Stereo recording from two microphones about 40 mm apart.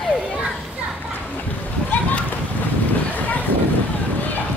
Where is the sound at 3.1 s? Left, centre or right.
Left.